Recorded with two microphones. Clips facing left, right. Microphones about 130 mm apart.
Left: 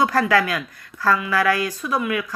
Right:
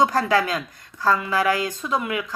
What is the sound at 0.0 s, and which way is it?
Speech, 20° right (ahead or behind).